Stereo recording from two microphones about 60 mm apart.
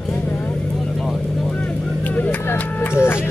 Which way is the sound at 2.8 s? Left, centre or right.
Left.